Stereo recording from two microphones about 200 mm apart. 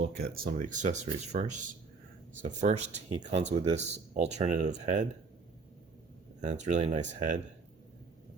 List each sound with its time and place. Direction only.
0.0 s speech: 50° right (ahead or behind)
6.4 s speech: 35° right (ahead or behind)